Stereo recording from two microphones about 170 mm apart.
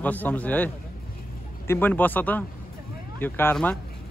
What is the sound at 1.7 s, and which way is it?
Speech, 10° left (ahead or behind).